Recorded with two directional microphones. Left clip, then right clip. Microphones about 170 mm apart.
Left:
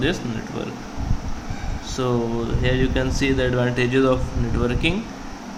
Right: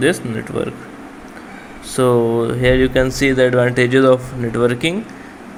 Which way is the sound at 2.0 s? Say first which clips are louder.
Right 10 dB; 40° right (ahead or behind).